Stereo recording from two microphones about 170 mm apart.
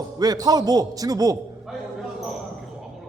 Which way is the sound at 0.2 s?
20° right (ahead or behind).